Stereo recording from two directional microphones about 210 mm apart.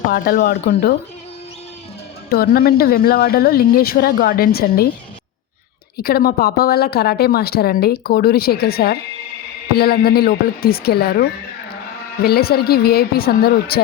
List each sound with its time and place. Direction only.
0.1 s a woman's voice: 45° left (ahead or behind)
2.3 s a woman's voice: 45° left (ahead or behind)
6.0 s a woman's voice: 45° left (ahead or behind)